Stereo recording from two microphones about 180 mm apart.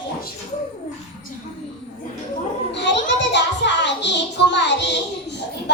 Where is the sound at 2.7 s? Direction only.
80° left.